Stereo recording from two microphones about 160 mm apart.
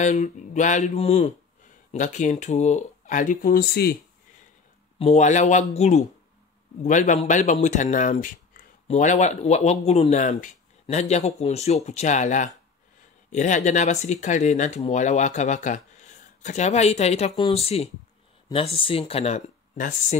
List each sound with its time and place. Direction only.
0.0 s speech: 50° left (ahead or behind); by 3.9 s 80° left
4.9 s speech: 45° left (ahead or behind)